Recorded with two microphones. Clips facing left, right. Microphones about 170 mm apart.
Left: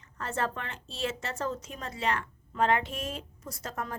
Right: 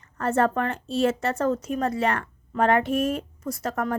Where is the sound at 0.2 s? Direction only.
50° right (ahead or behind).